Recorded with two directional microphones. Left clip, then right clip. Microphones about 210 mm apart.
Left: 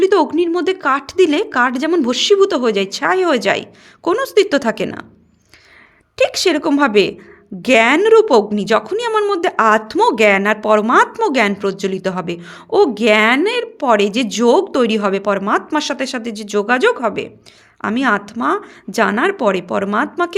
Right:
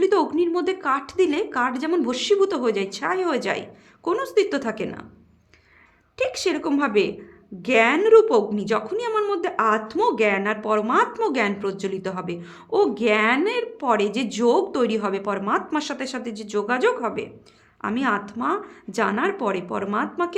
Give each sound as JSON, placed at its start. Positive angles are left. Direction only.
{"t": 0.0, "sound": "a woman's voice", "side_deg": 25}
{"t": 6.1, "sound": "a woman's voice", "side_deg": 35}